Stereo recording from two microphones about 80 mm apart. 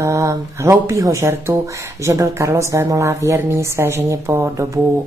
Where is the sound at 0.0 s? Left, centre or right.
Right.